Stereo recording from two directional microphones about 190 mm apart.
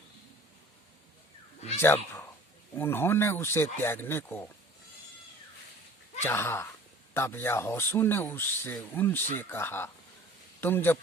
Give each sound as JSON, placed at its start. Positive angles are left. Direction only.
{"t": 1.8, "sound": "speech", "side_deg": 10}
{"t": 6.2, "sound": "speech", "side_deg": 10}